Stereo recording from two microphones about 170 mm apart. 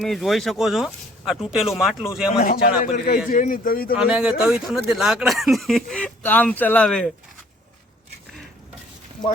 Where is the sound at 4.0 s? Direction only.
5° right (ahead or behind).